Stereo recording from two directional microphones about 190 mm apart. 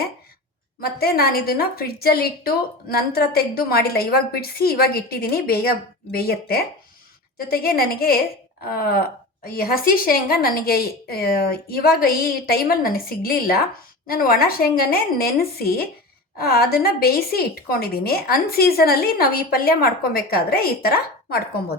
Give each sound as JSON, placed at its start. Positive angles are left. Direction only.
{"t": 0.8, "sound": "a woman's voice", "side_deg": 55}